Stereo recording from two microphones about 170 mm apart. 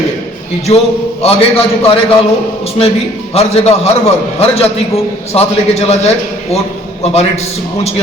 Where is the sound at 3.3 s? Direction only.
40° left (ahead or behind).